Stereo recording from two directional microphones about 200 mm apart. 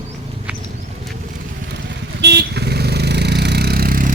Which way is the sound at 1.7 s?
60° right (ahead or behind).